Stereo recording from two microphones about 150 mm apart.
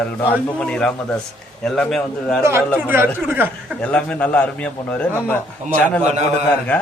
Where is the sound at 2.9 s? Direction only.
15° right (ahead or behind).